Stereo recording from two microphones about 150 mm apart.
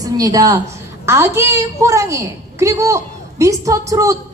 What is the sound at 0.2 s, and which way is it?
A woman's voice, 25° right (ahead or behind).